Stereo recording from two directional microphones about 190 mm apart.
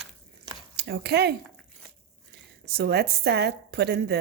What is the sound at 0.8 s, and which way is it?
Speech, 60° right (ahead or behind).